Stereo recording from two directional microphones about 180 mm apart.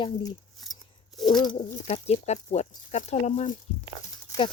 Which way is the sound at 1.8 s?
40° left (ahead or behind).